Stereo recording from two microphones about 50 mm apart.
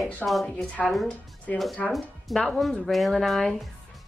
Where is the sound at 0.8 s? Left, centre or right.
Centre.